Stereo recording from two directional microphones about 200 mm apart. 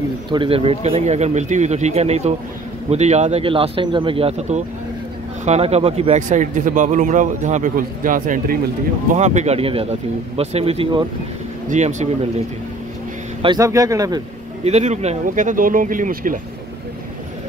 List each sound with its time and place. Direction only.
0.3 s a man's voice: 25° right (ahead or behind)
13.4 s speech: 20° right (ahead or behind)
14.6 s a man's voice: 35° right (ahead or behind)